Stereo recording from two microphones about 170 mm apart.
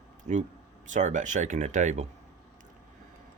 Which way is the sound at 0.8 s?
45° right (ahead or behind).